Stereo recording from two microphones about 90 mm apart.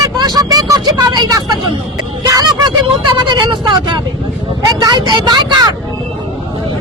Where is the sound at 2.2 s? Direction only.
45° right (ahead or behind).